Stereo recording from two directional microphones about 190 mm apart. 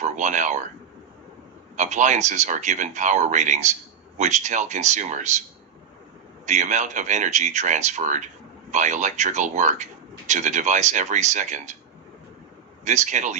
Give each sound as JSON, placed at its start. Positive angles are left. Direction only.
{"t": 0.0, "sound": "speech", "side_deg": -40}
{"t": 1.7, "sound": "speech", "side_deg": -40}
{"t": 6.4, "sound": "speech", "side_deg": -40}
{"t": 12.8, "sound": "speech", "side_deg": -40}